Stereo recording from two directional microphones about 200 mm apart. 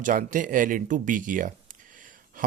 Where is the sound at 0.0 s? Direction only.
40° right (ahead or behind).